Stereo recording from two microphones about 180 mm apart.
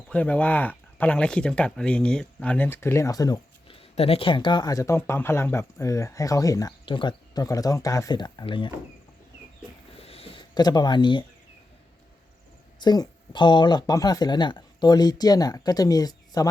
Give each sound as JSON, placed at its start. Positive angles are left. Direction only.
{"t": 0.1, "sound": "speech", "side_deg": 10}
{"t": 3.8, "sound": "speech", "side_deg": 35}
{"t": 10.0, "sound": "a sound", "side_deg": 35}
{"t": 12.8, "sound": "speech", "side_deg": 25}